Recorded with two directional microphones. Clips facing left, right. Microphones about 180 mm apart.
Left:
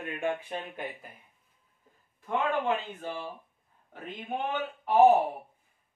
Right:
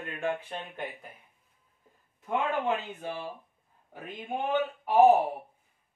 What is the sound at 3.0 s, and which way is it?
Speech, 10° right (ahead or behind).